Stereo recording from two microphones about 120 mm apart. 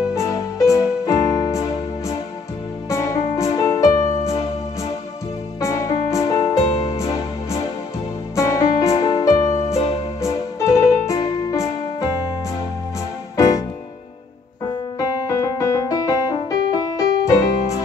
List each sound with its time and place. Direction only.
0.1 s music: 25° left (ahead or behind)
5.6 s music: 30° left (ahead or behind)
15.0 s music: 30° left (ahead or behind)